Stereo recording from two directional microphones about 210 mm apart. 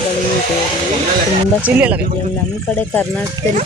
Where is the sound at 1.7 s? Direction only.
5° right (ahead or behind).